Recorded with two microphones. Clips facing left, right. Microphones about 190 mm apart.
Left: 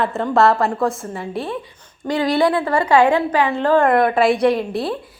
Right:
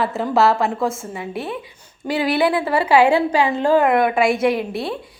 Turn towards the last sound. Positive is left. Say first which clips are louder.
# left 2 dB
turn(degrees=0)  # may be behind; listen again after turning